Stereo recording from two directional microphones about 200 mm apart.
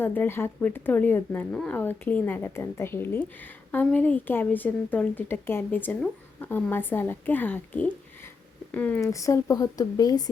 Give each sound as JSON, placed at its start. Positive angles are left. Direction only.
{"t": 0.0, "sound": "speech", "side_deg": 10}